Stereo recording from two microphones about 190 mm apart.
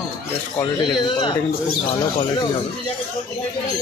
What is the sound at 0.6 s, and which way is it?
Speech, 25° left (ahead or behind).